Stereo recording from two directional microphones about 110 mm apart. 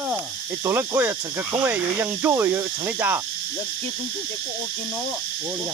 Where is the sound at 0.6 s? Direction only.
20° right (ahead or behind).